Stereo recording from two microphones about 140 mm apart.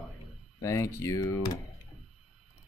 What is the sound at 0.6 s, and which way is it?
Speech, 20° left (ahead or behind).